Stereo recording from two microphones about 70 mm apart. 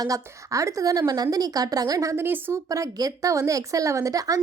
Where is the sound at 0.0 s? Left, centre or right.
Right.